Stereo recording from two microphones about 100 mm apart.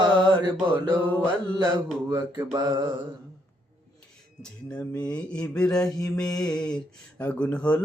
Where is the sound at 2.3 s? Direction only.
45° right (ahead or behind).